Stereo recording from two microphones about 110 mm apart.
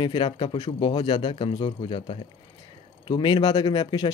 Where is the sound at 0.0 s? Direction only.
50° left (ahead or behind).